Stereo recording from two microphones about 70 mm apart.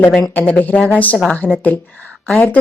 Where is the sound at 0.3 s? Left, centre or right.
Left.